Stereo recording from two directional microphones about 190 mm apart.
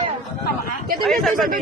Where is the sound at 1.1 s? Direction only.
Centre (ahead or behind).